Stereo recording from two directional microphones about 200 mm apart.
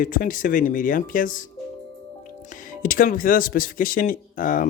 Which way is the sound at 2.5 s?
40° left (ahead or behind).